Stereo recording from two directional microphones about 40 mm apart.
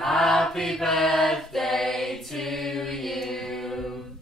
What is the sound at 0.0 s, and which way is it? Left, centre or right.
Mantra, centre.